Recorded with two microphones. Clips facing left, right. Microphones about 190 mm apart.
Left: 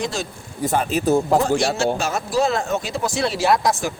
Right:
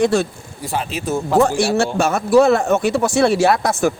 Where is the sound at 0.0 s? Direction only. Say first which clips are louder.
Right 10 dB; 60° right (ahead or behind).